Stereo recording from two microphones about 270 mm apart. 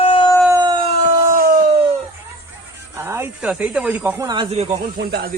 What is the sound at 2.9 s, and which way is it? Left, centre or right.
Speech, centre.